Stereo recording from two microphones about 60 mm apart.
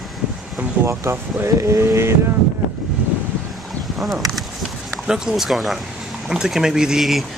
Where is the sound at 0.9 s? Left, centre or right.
Right.